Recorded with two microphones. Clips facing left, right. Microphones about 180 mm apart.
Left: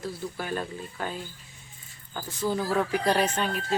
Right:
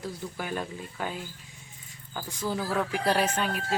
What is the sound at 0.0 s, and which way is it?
Speech, 15° right (ahead or behind).